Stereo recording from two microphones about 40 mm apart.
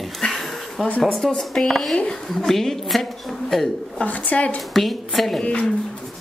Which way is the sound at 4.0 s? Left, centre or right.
Left.